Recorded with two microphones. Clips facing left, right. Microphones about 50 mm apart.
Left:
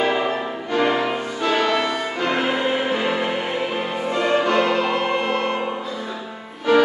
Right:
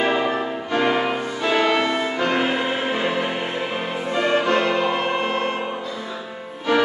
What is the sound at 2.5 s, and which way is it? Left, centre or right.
Music, centre.